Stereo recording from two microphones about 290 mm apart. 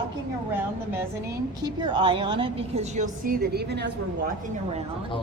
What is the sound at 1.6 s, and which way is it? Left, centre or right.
A woman's voice, centre.